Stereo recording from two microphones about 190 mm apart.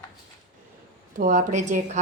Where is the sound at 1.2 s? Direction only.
40° right (ahead or behind).